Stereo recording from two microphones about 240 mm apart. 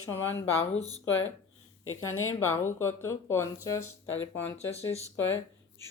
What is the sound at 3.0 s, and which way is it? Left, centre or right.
Speech, centre.